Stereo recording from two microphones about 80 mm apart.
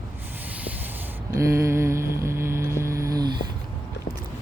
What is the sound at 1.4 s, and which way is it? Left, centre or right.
Mantra, right.